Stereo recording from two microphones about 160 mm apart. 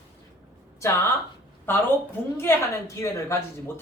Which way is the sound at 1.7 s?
15° left (ahead or behind).